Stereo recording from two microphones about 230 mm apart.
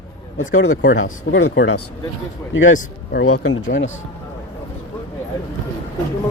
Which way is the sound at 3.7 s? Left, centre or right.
Left.